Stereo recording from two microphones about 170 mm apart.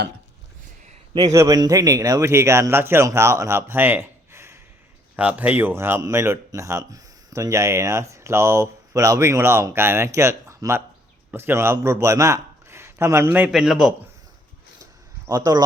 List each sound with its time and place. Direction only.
1.1 s a man's voice: 20° right (ahead or behind); by 13.9 s centre (ahead or behind)
15.3 s speech: 20° right (ahead or behind)